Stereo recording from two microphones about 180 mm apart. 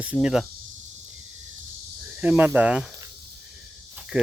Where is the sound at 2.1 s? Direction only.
10° right (ahead or behind).